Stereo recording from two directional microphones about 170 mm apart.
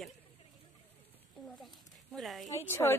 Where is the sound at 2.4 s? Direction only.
15° left (ahead or behind).